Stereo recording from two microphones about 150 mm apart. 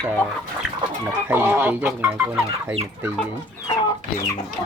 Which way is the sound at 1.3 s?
15° right (ahead or behind).